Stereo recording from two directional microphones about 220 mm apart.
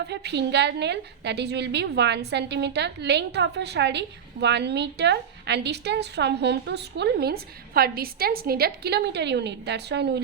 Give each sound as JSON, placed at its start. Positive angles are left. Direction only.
{"t": 0.0, "sound": "a woman's voice", "side_deg": -50}